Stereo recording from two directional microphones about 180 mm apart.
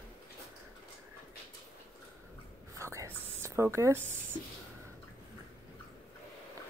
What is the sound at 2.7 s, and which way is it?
Whispering, 15° right (ahead or behind).